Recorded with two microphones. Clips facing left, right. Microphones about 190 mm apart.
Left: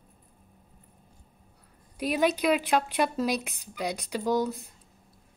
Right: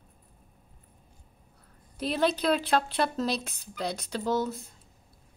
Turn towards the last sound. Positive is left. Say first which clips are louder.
# left 2 dB
turn(degrees=15)  # may be behind; listen again after turning